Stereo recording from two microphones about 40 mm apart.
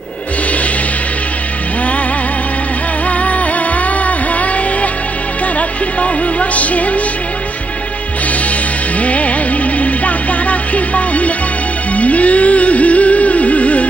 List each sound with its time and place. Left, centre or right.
3.1 s music: left
5.6 s music: left
9.0 s music: left